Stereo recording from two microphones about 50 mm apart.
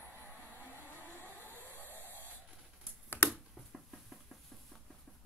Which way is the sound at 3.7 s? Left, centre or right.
Centre.